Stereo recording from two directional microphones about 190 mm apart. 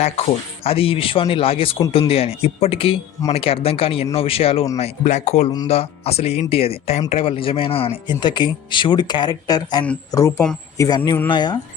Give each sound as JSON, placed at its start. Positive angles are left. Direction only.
{"t": 0.0, "sound": "speech", "side_deg": 35}